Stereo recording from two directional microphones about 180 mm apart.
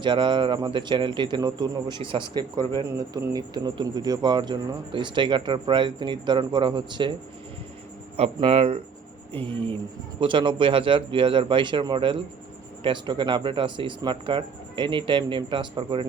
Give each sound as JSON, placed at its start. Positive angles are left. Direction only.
{"t": 0.0, "sound": "a man's voice", "side_deg": -25}
{"t": 8.1, "sound": "a man's voice", "side_deg": -35}